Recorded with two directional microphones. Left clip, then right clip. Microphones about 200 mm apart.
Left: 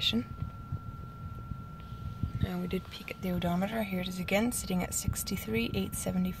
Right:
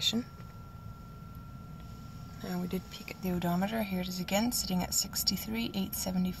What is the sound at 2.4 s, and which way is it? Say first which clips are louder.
A woman's voice: left 1 dB; 15° right (ahead or behind).